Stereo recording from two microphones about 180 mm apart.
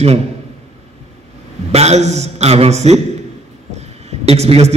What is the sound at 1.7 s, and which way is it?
A man's voice, 35° right (ahead or behind).